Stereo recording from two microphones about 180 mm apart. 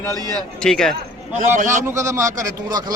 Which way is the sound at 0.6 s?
Centre (ahead or behind).